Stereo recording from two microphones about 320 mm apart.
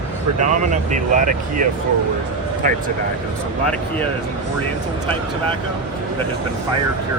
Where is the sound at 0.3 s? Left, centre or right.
Right.